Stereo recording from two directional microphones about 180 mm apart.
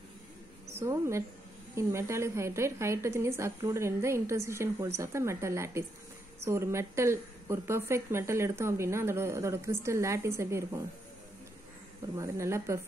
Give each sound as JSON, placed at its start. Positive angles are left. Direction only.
{"t": 0.7, "sound": "a woman's voice", "side_deg": -15}
{"t": 12.2, "sound": "a woman's voice", "side_deg": -15}